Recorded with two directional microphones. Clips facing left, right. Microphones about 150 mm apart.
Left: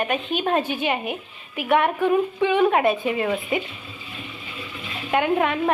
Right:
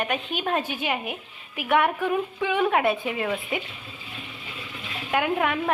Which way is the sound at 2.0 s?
25° left (ahead or behind).